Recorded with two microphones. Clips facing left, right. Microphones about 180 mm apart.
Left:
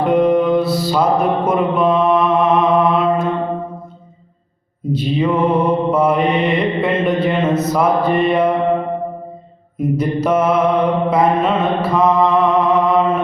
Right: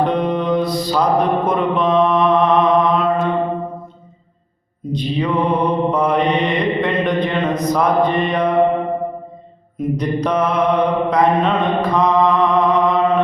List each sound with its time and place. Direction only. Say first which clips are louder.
0.0 s music: left 5 dB; 5° left (ahead or behind)
4.9 s mantra: left 3 dB; 5° left (ahead or behind)
9.7 s mantra: left 2 dB; 5° left (ahead or behind)